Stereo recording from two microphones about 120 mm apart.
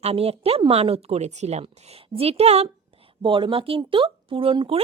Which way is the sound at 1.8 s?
60° right (ahead or behind).